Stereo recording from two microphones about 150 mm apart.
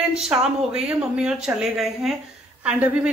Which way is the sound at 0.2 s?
5° right (ahead or behind).